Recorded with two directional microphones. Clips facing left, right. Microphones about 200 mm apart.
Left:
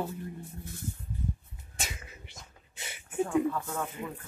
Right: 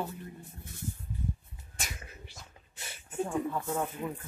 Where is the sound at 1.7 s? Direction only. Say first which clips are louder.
Left 2 dB; 25° left (ahead or behind).